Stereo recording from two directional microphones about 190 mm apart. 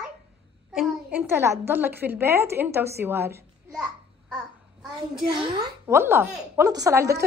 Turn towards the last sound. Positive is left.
turn(degrees=-15)  # may be behind; listen again after turning